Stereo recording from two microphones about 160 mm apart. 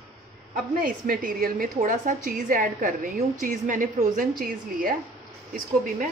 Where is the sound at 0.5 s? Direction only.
65° right (ahead or behind).